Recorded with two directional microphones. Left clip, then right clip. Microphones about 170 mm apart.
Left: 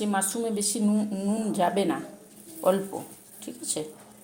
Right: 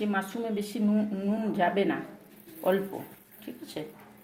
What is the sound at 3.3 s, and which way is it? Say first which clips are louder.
Speech: left 5 dB; 20° left (ahead or behind).